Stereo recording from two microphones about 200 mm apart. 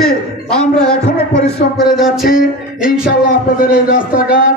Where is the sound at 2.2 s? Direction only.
45° left (ahead or behind).